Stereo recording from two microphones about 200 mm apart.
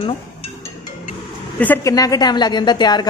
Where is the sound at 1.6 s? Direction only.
10° left (ahead or behind).